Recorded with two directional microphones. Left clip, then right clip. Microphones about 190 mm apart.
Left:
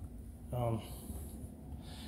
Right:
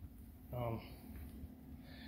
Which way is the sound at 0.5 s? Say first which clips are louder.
Left 5 dB; 15° left (ahead or behind).